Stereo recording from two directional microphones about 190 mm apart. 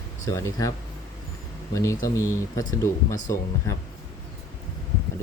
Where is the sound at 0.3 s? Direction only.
15° left (ahead or behind).